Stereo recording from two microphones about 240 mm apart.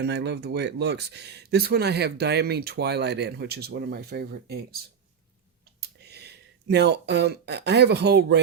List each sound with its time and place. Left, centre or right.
0.0 s speech: right
5.8 s speech: right